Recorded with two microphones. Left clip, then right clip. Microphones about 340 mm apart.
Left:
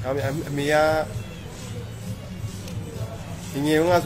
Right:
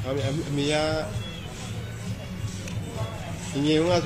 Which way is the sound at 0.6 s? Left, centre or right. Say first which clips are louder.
Left 6 dB; left.